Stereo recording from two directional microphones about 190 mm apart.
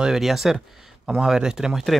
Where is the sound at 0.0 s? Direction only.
Centre (ahead or behind).